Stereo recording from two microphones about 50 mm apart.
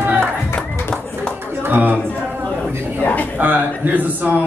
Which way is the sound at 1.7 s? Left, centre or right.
Right.